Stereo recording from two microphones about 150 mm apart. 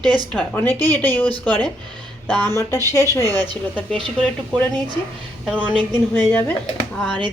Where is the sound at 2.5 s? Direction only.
20° left (ahead or behind).